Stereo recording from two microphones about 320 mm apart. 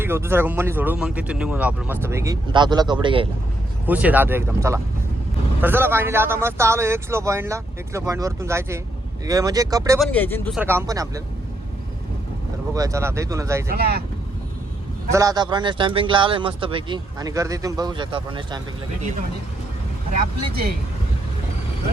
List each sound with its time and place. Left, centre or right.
0.0 s speech: centre
3.8 s speech: centre
10.0 s speech: centre
12.7 s speech: centre
13.7 s speech: right
15.1 s speech: centre
20.5 s speech: right